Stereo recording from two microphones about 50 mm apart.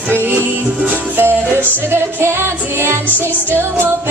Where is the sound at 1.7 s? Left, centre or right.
Right.